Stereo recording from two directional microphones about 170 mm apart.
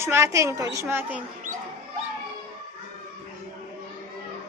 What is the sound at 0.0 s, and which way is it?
A woman's voice, 15° right (ahead or behind).